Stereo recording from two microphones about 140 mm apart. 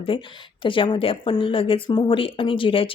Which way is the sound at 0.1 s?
40° left (ahead or behind).